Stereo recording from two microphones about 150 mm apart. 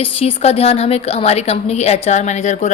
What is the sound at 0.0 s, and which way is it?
A woman's voice, 40° left (ahead or behind).